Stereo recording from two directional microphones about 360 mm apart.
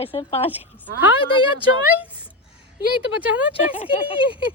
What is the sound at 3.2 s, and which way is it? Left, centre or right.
Speech, centre.